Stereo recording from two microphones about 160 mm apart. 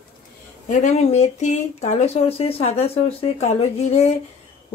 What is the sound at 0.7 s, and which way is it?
A woman's voice, 45° left (ahead or behind).